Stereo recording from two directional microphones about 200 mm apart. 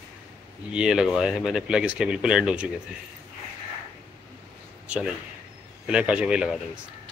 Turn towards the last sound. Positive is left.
turn(degrees=-5)  # may be behind; listen again after turning